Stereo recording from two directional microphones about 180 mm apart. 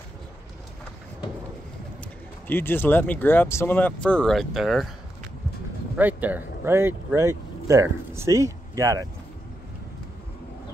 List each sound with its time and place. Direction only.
2.4 s speech: 10° left (ahead or behind)
5.9 s speech: 10° right (ahead or behind)